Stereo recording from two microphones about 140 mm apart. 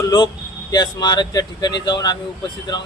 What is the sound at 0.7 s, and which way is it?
Speech, 30° left (ahead or behind).